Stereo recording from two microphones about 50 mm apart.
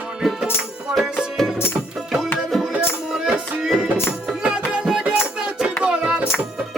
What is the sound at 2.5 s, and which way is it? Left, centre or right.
Music, centre.